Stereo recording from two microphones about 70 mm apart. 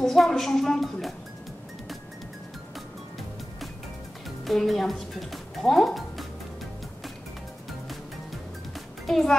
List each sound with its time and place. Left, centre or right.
0.0 s a woman's voice: centre
4.5 s speech: centre
9.0 s a child's voice: centre